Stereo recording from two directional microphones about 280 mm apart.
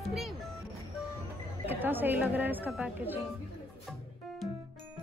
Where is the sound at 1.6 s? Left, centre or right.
Centre.